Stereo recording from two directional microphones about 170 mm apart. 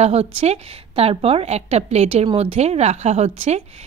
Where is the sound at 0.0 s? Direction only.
40° right (ahead or behind).